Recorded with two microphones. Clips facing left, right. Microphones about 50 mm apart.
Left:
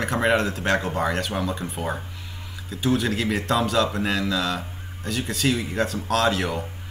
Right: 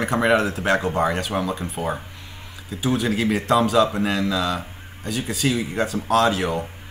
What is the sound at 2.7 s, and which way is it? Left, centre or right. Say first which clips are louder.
A man's voice: right 1 dB; centre.